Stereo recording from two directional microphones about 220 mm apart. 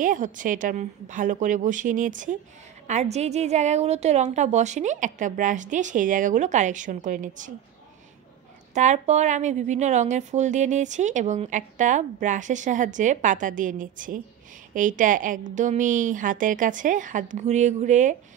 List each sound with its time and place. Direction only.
0.0 s a woman's voice: 35° right (ahead or behind)
8.7 s a woman's voice: 30° right (ahead or behind)